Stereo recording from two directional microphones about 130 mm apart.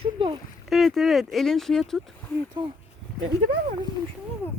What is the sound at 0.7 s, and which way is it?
Speech, centre (ahead or behind).